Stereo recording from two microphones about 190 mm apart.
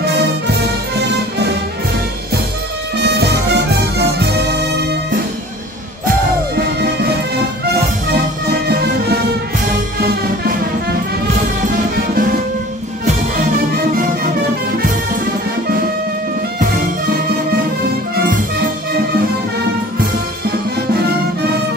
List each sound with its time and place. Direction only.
3.0 s music: 60° right (ahead or behind)
6.8 s music: 60° right (ahead or behind)
8.6 s music: 55° right (ahead or behind)
11.6 s music: 50° right (ahead or behind)